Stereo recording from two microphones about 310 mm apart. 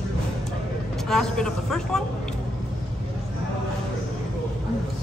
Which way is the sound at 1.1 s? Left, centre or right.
Centre.